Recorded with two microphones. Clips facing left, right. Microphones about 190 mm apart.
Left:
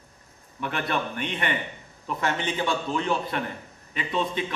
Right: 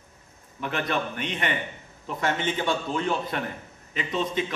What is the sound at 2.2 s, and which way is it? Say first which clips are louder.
A man's voice: right 1 dB; 45° right (ahead or behind).